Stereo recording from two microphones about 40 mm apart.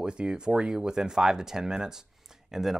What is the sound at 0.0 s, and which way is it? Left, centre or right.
Speech, right.